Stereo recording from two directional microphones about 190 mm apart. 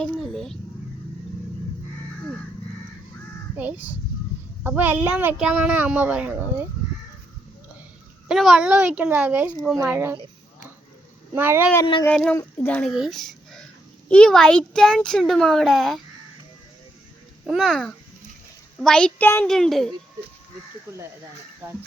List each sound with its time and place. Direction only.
0.0 s a sound: centre (ahead or behind)
3.6 s speech: 10° right (ahead or behind)
8.3 s speech: centre (ahead or behind)
11.3 s speech: 10° right (ahead or behind)
11.8 s speech: 25° left (ahead or behind)
12.0 s speech: 5° left (ahead or behind)
17.4 s speech: centre (ahead or behind)